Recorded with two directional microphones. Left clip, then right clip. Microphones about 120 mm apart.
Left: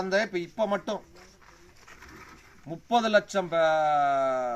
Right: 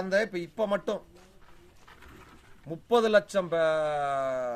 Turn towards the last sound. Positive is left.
turn(degrees=-35)  # may be behind; listen again after turning